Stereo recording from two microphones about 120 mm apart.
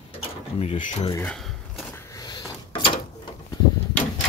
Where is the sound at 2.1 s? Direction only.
40° left (ahead or behind).